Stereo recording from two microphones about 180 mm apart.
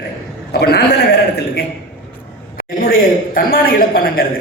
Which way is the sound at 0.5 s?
60° left (ahead or behind).